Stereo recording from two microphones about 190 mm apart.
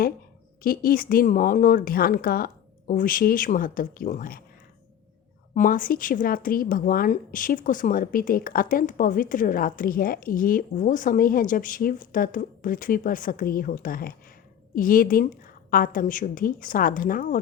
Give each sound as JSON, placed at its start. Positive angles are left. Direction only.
{"t": 0.6, "sound": "speech", "side_deg": 50}
{"t": 5.5, "sound": "speech", "side_deg": 45}